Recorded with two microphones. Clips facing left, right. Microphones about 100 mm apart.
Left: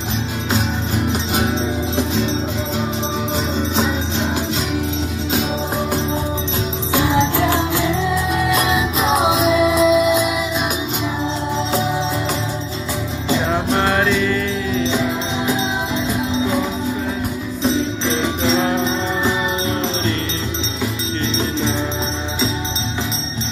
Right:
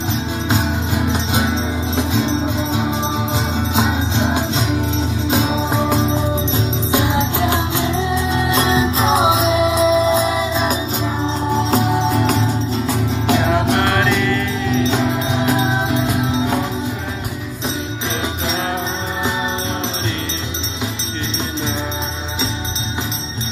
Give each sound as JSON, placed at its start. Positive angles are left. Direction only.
{"t": 0.9, "sound": "music", "side_deg": -20}
{"t": 3.7, "sound": "music", "side_deg": -15}
{"t": 5.3, "sound": "music", "side_deg": -20}
{"t": 11.5, "sound": "music", "side_deg": -50}